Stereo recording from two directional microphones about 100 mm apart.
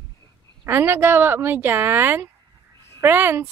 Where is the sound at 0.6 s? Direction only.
25° right (ahead or behind).